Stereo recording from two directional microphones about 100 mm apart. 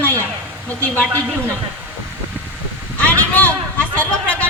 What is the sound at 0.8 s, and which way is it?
Speech, 15° left (ahead or behind).